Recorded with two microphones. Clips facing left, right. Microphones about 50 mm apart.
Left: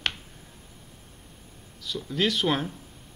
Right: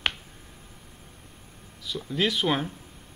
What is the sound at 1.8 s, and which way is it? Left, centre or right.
Speech, centre.